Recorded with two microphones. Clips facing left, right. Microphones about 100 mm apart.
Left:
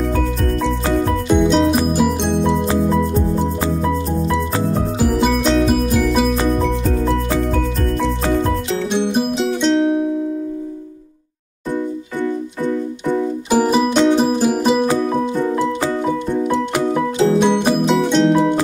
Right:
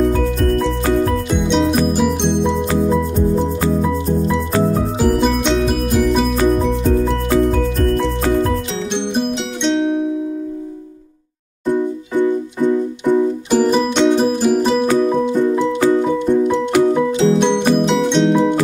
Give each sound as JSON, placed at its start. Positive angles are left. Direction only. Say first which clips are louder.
{"t": 1.3, "sound": "music", "louder": "left 4 dB", "side_deg": 0}
{"t": 5.0, "sound": "music", "louder": "even", "side_deg": 0}
{"t": 8.9, "sound": "music", "louder": "left 1 dB", "side_deg": 5}
{"t": 12.2, "sound": "keyboard", "louder": "right 6 dB", "side_deg": -15}
{"t": 13.5, "sound": "music", "louder": "left 2 dB", "side_deg": 10}
{"t": 17.4, "sound": "music", "louder": "right 1 dB", "side_deg": 5}